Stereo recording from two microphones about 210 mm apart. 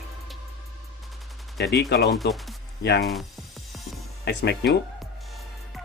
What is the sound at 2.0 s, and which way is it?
Speech, centre (ahead or behind).